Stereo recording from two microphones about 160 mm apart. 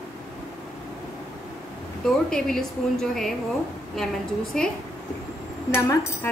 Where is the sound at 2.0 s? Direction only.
5° left (ahead or behind).